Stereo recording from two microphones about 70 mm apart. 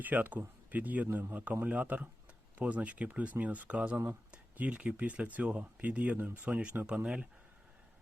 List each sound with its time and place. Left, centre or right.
0.0 s speech: right